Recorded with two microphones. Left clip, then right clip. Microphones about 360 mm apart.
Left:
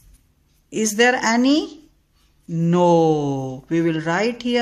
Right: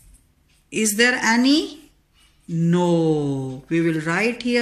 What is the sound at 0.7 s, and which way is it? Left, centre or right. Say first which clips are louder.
Speech: left 2 dB; left.